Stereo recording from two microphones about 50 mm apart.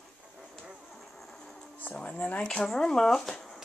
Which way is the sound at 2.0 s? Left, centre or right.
Left.